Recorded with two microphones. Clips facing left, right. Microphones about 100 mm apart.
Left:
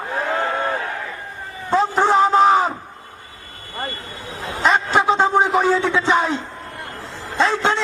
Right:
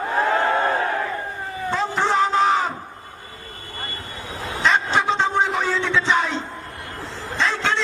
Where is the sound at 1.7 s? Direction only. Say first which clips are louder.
Left 5 dB; 40° left (ahead or behind).